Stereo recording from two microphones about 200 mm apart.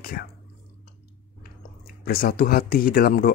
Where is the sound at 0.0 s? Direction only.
50° left (ahead or behind).